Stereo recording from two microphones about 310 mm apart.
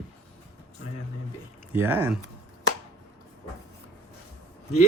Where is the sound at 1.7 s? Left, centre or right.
Centre.